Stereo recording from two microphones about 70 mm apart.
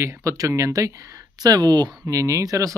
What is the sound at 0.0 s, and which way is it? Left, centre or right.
Speech, right.